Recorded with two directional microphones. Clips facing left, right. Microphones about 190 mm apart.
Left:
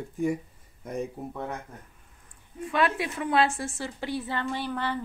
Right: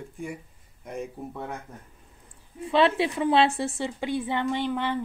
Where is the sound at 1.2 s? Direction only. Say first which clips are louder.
Even; 5° left (ahead or behind).